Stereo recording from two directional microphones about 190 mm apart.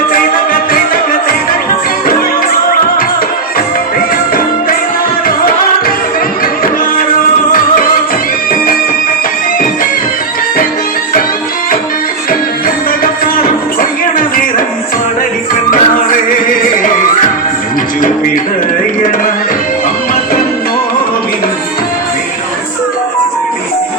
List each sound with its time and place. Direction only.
0.1 s music: 50° left (ahead or behind)
12.3 s music: 50° left (ahead or behind)
15.7 s music: 45° left (ahead or behind)